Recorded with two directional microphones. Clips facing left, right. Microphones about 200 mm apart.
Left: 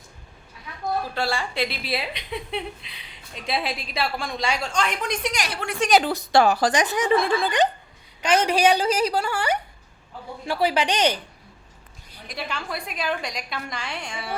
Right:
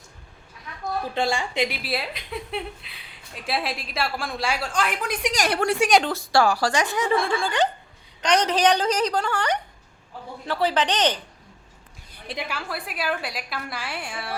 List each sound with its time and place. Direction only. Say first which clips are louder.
1.1 s a woman's voice: right 2 dB; 20° right (ahead or behind)
1.8 s a woman's voice: even; centre (ahead or behind)
6.1 s speech: left 2 dB; 20° left (ahead or behind)
8.2 s a woman's voice: left 1 dB; 5° left (ahead or behind)
12.4 s a woman's voice: left 1 dB; 5° right (ahead or behind)